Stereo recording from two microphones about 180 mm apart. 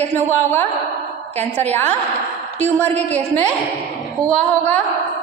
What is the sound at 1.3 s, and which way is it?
Speech, 40° right (ahead or behind).